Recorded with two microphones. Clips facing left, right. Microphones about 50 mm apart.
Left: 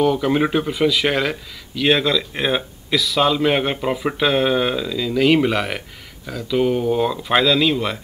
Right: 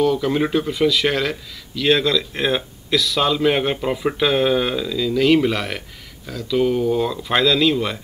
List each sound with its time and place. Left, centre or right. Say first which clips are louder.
0.0 s speech: left 1 dB; centre